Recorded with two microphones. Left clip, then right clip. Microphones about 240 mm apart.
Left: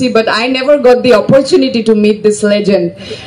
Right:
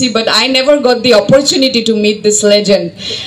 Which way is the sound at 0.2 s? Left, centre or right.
Right.